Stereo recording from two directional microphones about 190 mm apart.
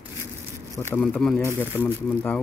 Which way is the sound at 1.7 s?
10° right (ahead or behind).